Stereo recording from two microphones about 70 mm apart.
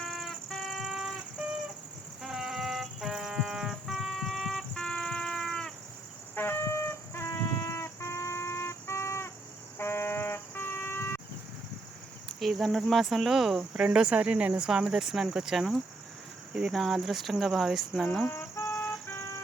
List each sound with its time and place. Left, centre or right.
0.0 s music: centre
0.8 s vehicle: centre
2.2 s a sound: centre
6.3 s music: left
9.7 s vehicle: left
12.4 s speech: centre
14.7 s speech: centre
18.3 s cricket: left
19.0 s siren: left